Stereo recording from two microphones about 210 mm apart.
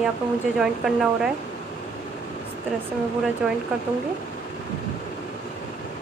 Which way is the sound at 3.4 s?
Centre (ahead or behind).